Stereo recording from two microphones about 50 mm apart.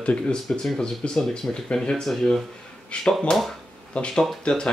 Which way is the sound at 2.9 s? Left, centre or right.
Left.